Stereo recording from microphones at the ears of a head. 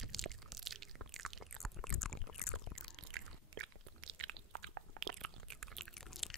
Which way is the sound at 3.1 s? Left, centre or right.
Right.